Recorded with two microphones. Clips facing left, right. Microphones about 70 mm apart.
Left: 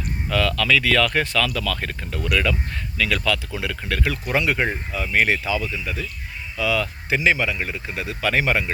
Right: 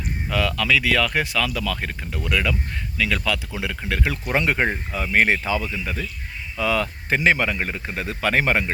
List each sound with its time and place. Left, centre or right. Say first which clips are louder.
0.3 s speech: left 1 dB; centre; by 8.7 s right